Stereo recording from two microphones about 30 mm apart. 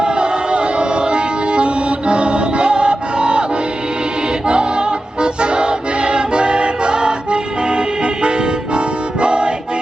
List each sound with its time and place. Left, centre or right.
0.0 s music: right
4.4 s music: right